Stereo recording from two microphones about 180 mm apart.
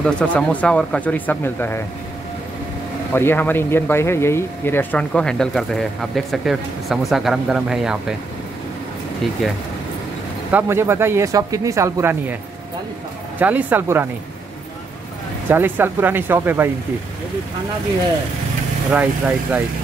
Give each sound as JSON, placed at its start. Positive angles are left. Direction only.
{"t": 0.0, "sound": "speech", "side_deg": 5}
{"t": 3.1, "sound": "speech", "side_deg": 10}
{"t": 10.5, "sound": "speech", "side_deg": -15}
{"t": 13.4, "sound": "speech", "side_deg": -10}
{"t": 15.4, "sound": "speech", "side_deg": -10}
{"t": 18.9, "sound": "speech", "side_deg": -10}